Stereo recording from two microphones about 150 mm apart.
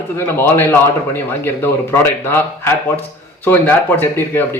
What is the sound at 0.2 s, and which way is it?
A man's voice, 15° left (ahead or behind).